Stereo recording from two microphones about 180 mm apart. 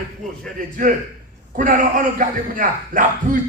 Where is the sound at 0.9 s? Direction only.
50° right (ahead or behind).